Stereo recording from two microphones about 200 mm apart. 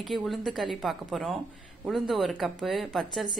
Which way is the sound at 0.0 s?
Centre (ahead or behind).